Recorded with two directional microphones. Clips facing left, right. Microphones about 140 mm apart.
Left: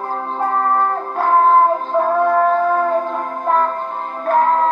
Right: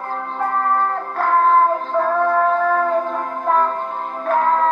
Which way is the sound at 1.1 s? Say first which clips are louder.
Left 2 dB; 25° left (ahead or behind).